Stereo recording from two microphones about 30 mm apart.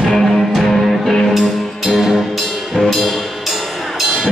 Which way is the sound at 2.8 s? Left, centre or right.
Centre.